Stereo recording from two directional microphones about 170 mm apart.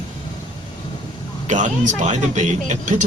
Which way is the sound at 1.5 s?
45° right (ahead or behind).